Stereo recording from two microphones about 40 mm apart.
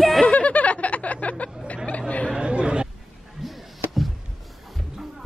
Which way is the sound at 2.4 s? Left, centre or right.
Right.